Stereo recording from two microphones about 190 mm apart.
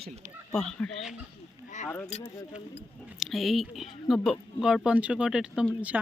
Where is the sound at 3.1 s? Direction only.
Centre (ahead or behind).